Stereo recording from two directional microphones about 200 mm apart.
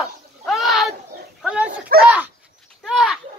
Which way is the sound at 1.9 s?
45° right (ahead or behind).